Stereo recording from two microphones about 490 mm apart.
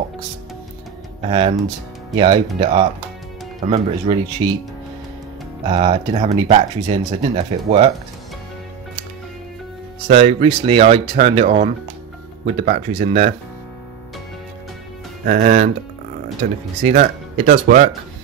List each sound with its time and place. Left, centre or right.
2.1 s speech: centre
5.7 s speech: centre
10.0 s speech: centre
15.2 s speech: centre